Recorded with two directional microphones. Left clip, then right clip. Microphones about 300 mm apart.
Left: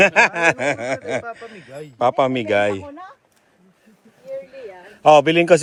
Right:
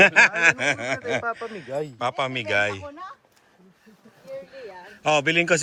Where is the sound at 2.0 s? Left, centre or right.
Centre.